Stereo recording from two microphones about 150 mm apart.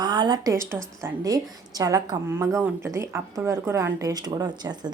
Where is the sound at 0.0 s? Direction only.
30° right (ahead or behind).